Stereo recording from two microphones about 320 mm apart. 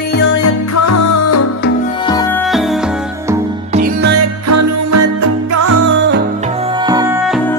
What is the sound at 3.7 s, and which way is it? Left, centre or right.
Music, right.